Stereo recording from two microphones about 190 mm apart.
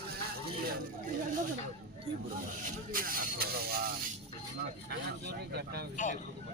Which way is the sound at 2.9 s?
50° right (ahead or behind).